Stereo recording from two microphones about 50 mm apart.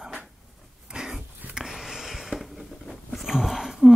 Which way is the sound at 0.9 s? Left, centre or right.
Centre.